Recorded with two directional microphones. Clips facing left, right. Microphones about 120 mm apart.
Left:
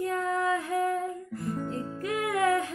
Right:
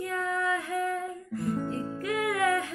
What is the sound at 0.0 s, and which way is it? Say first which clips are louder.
Music: left 2 dB; 30° left (ahead or behind).